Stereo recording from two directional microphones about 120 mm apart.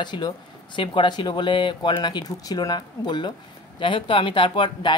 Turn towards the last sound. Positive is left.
turn(degrees=45)  # may be behind; listen again after turning